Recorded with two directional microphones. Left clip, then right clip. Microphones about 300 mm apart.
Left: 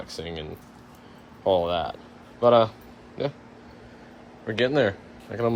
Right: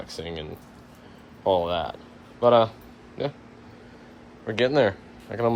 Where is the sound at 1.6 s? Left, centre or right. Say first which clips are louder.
Left 1 dB; centre.